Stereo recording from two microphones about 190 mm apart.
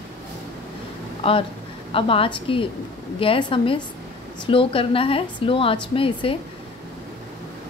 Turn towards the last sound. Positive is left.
turn(degrees=25)  # may be behind; listen again after turning